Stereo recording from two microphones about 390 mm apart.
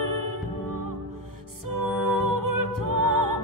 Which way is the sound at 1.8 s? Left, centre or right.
Right.